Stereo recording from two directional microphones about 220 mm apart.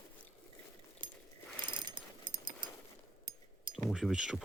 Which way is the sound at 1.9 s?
20° right (ahead or behind).